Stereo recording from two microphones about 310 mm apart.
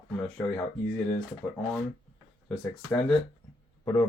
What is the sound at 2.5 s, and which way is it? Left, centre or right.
Speech, centre.